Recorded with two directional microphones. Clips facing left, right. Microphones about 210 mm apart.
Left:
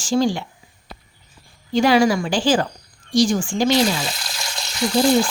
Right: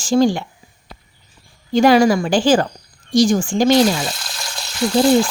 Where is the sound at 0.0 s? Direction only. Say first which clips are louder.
Right 4 dB; 50° right (ahead or behind).